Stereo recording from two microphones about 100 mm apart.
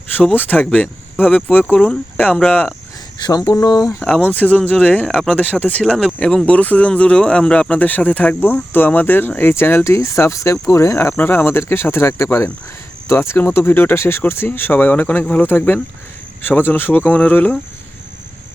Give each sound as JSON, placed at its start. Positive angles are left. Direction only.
{"t": 0.3, "sound": "speech", "side_deg": 15}
{"t": 3.2, "sound": "speech", "side_deg": 40}
{"t": 4.0, "sound": "speech", "side_deg": 15}